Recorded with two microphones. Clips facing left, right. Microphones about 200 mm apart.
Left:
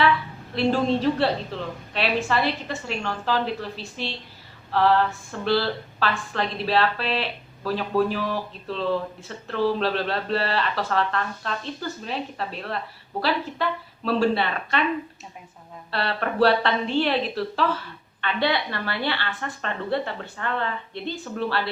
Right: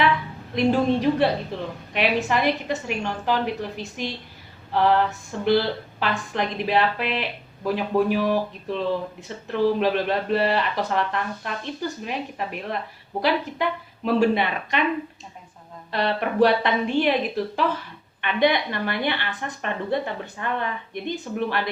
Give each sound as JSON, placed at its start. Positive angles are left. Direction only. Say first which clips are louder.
{"t": 0.5, "sound": "a woman's voice", "louder": "right 2 dB", "side_deg": -15}
{"t": 15.9, "sound": "a woman's voice", "louder": "right 3 dB", "side_deg": -15}